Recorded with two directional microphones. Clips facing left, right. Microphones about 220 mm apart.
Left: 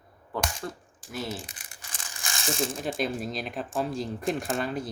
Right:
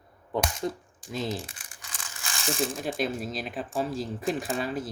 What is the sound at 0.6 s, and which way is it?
Speech, 20° right (ahead or behind).